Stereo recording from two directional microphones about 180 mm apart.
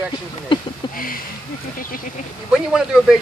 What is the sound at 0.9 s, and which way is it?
Speech, 50° left (ahead or behind).